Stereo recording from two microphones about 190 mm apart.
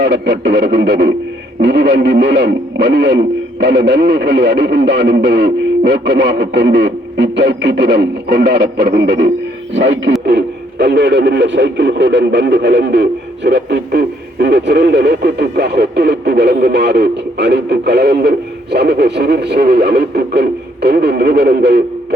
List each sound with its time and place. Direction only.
0.0 s speech: 65° right (ahead or behind)
9.7 s speech: 75° right (ahead or behind)
10.2 s speech: 60° right (ahead or behind)